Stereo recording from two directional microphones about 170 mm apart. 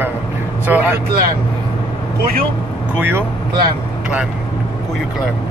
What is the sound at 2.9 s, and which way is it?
Speech, 15° right (ahead or behind).